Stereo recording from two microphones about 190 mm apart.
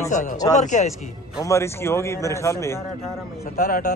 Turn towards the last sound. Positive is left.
turn(degrees=45)  # may be behind; listen again after turning